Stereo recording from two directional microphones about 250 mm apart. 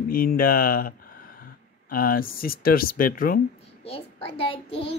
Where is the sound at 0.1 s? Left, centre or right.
Left.